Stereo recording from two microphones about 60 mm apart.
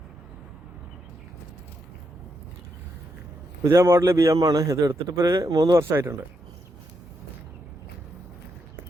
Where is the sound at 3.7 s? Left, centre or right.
Right.